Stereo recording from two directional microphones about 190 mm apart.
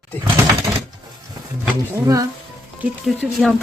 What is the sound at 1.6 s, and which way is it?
Speech, 15° right (ahead or behind).